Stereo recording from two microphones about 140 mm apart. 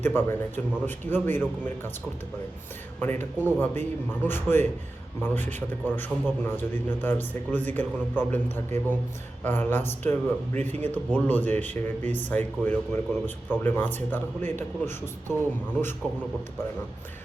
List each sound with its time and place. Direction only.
0.0 s a man's voice: 15° left (ahead or behind)
3.0 s a man's voice: 15° left (ahead or behind)
16.0 s a man's voice: 10° left (ahead or behind)